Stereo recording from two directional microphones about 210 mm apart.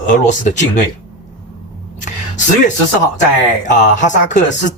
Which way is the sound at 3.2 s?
35° left (ahead or behind).